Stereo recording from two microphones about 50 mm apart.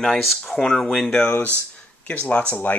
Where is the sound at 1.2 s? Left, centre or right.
Left.